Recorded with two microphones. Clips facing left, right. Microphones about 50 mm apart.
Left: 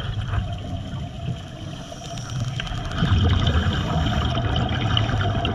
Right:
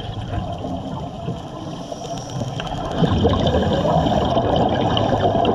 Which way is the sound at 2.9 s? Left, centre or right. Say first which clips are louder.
Right 7 dB; left.